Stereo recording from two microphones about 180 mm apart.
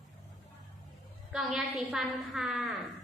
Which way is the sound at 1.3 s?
Centre (ahead or behind).